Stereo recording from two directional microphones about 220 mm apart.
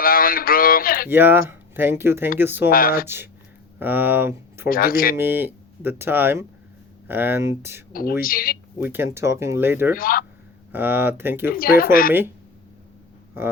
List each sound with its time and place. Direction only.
0.0 s a sound: 40° left (ahead or behind)
1.1 s speech: 10° right (ahead or behind)
2.6 s speech: 40° left (ahead or behind)
3.8 s speech: 10° right (ahead or behind)
4.7 s speech: 40° left (ahead or behind)
5.1 s speech: 10° right (ahead or behind)
8.2 s speech: 40° left (ahead or behind)
8.8 s speech: 10° right (ahead or behind)
9.9 s speech: 40° left (ahead or behind)
10.7 s speech: 10° right (ahead or behind)
11.5 s speech: 40° left (ahead or behind)